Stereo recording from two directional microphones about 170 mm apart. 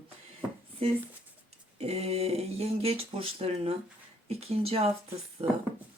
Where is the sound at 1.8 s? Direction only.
40° right (ahead or behind).